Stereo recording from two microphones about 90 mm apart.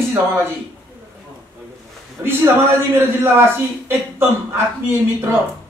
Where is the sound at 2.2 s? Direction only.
25° right (ahead or behind).